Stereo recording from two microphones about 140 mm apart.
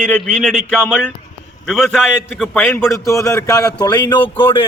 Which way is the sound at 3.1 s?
25° left (ahead or behind).